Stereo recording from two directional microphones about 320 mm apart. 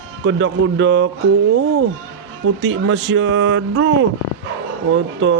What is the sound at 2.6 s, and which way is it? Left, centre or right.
Music, right.